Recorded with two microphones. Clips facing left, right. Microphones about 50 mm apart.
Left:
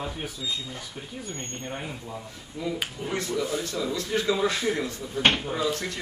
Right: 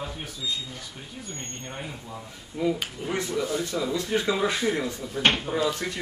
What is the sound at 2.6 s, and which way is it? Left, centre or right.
Speech, right.